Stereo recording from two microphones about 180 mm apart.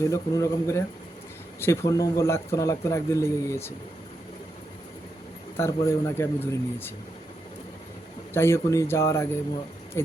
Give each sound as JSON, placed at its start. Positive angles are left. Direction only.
{"t": 0.0, "sound": "a man's voice", "side_deg": 15}
{"t": 5.5, "sound": "a man's voice", "side_deg": 15}
{"t": 8.3, "sound": "a man's voice", "side_deg": 15}